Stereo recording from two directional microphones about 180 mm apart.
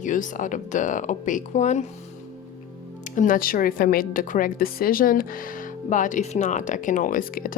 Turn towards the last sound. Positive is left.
turn(degrees=50)  # may be behind; listen again after turning